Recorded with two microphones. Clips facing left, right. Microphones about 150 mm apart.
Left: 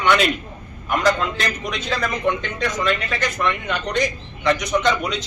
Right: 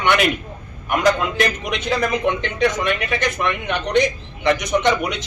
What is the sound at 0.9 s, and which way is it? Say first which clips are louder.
A man's voice: right 2 dB; 15° right (ahead or behind).